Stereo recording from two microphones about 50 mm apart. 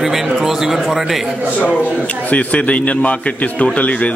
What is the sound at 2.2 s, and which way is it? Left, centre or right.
A man's voice, left.